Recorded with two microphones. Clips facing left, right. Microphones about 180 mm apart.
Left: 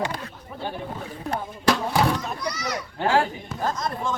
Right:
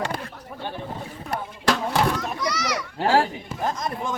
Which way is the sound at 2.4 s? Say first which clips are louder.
Right 3 dB; 85° right.